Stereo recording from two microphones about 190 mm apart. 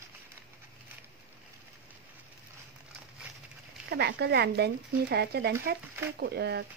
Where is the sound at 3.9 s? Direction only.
60° right (ahead or behind).